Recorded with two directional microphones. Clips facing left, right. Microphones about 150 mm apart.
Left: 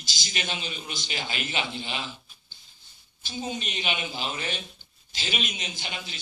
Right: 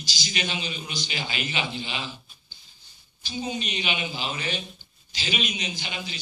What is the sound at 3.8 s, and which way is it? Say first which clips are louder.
Speech: right 1 dB; 5° right (ahead or behind).